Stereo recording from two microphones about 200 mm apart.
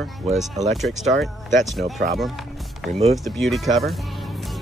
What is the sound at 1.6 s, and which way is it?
Speech, centre (ahead or behind).